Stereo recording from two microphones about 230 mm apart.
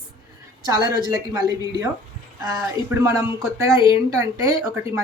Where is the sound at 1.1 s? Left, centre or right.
Centre.